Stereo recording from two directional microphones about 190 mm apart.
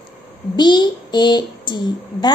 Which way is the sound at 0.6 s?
25° left (ahead or behind).